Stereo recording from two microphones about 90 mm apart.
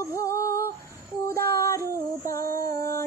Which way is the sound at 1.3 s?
35° left (ahead or behind).